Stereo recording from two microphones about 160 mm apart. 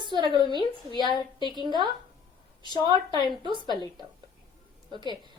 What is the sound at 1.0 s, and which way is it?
Speech, 30° left (ahead or behind).